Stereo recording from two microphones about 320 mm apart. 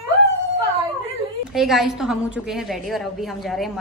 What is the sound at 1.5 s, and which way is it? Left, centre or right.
A woman's voice, centre.